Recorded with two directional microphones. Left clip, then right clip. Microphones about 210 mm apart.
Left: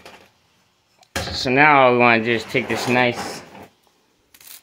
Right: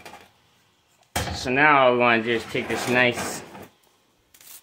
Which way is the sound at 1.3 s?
40° left (ahead or behind).